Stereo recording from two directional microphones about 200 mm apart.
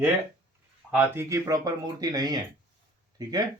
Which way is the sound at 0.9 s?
10° right (ahead or behind).